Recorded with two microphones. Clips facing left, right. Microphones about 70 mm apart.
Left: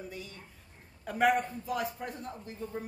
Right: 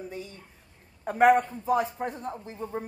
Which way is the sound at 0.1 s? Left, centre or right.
Right.